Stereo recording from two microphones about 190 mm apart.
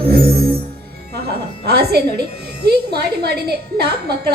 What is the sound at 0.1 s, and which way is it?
Music, 55° right (ahead or behind).